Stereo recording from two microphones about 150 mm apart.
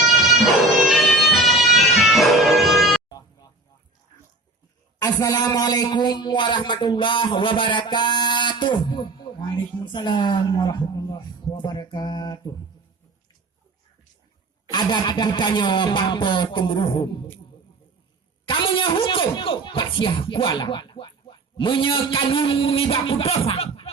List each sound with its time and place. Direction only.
0.3 s bagpipes: centre (ahead or behind)
4.9 s a man's voice: 25° left (ahead or behind)
14.7 s speech: 30° left (ahead or behind)
18.4 s speech: 35° left (ahead or behind)